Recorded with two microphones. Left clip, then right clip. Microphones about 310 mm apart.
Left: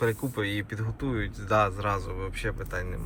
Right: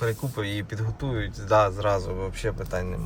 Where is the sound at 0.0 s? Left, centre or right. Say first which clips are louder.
Left 1 dB; centre.